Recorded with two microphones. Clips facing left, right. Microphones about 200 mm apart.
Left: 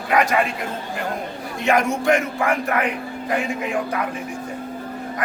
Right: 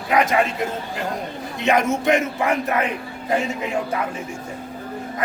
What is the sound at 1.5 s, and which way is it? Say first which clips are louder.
A man's voice: even; 20° right (ahead or behind).